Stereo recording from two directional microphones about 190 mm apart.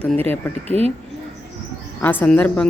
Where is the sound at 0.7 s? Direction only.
35° right (ahead or behind).